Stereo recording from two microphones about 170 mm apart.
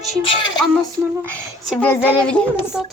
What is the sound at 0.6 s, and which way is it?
A woman's voice, 5° left (ahead or behind).